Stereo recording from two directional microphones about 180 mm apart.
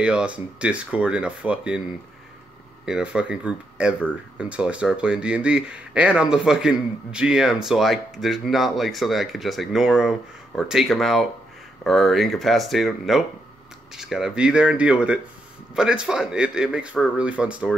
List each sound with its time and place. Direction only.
0.0 s speech: 5° right (ahead or behind)
2.8 s speech: 5° right (ahead or behind)